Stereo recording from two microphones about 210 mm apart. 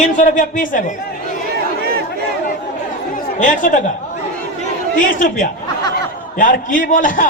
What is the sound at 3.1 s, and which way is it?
Chatter, 40° left (ahead or behind).